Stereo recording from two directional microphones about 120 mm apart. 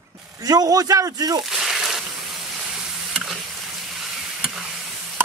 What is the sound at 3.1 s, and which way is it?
Sizzle, centre (ahead or behind).